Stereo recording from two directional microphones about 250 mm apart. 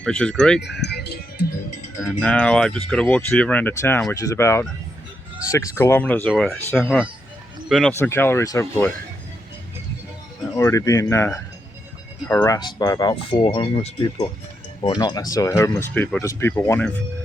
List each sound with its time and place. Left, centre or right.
0.0 s speech: centre
0.6 s music: left
2.0 s speech: centre
10.5 s speech: centre